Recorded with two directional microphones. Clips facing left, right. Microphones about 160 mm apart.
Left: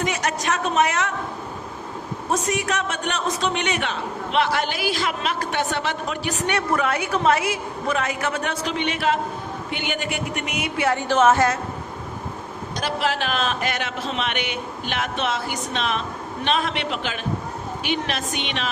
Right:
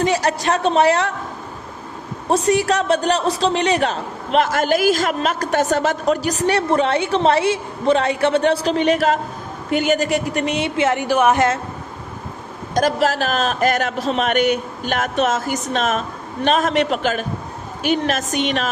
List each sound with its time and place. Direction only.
0.0 s a man's voice: 35° right (ahead or behind)
2.3 s a man's voice: 30° right (ahead or behind)
12.7 s a man's voice: 45° right (ahead or behind)